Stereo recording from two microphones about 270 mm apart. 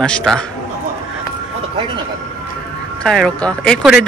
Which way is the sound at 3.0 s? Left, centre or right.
Centre.